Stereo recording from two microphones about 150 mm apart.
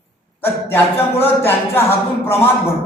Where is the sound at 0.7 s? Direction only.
15° left (ahead or behind).